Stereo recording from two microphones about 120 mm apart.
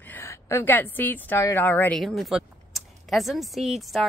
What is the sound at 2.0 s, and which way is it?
Speech, centre (ahead or behind).